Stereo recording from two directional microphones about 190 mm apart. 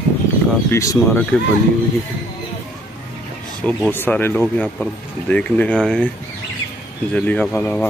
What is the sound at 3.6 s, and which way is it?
Speech, 10° left (ahead or behind).